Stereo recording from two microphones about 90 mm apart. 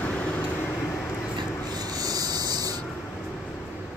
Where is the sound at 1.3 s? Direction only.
45° right (ahead or behind).